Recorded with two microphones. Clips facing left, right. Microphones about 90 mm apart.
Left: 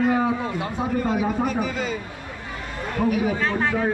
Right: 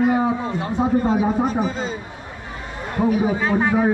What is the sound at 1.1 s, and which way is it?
Speech, 30° right (ahead or behind).